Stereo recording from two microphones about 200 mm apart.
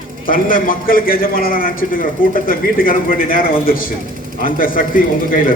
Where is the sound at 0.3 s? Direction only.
45° left (ahead or behind).